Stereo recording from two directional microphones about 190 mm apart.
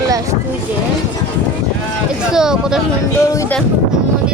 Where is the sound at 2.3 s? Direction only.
5° right (ahead or behind).